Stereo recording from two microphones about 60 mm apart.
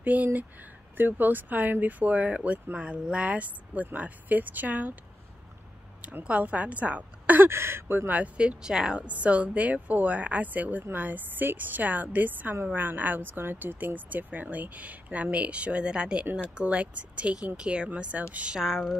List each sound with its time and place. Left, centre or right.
0.0 s speech: right
6.2 s speech: right
7.3 s speech: right
8.1 s speech: right
9.1 s speech: right
18.6 s speech: centre